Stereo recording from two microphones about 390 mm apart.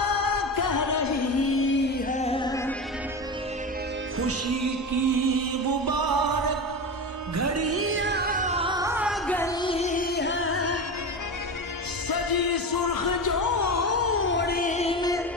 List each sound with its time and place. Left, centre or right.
0.0 s music: left
2.0 s music: centre
4.2 s music: right
7.3 s music: right; by 10.8 s left
12.1 s a sound: left; by 15.1 s centre